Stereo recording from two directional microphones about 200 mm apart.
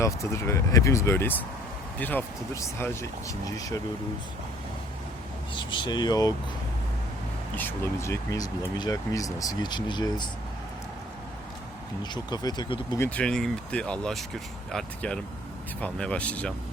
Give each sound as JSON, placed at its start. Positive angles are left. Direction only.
{"t": 0.0, "sound": "speech", "side_deg": 15}
{"t": 5.5, "sound": "speech", "side_deg": 25}
{"t": 7.5, "sound": "speech", "side_deg": 10}
{"t": 12.1, "sound": "speech", "side_deg": 20}
{"t": 13.1, "sound": "speech", "side_deg": 5}